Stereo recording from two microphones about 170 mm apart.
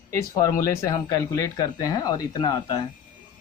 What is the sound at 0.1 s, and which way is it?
Speech, 20° left (ahead or behind).